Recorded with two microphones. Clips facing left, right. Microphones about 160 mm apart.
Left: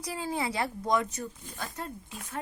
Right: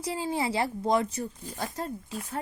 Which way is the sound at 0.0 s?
25° right (ahead or behind).